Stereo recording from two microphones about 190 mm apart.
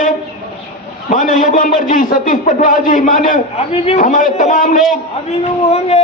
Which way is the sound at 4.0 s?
45° left (ahead or behind).